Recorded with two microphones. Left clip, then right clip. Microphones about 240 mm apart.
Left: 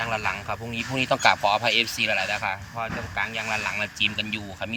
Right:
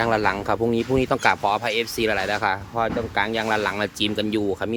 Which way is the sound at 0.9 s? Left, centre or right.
Centre.